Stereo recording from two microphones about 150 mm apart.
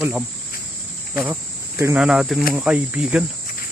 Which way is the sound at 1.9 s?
5° right (ahead or behind).